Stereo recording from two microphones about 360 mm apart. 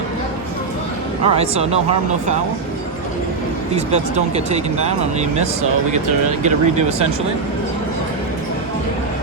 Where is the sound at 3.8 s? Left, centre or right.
Centre.